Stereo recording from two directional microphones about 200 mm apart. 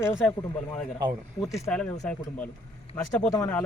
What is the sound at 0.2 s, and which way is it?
Speech, 5° left (ahead or behind).